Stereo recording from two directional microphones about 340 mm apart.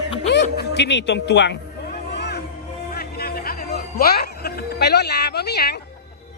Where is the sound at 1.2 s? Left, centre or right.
Left.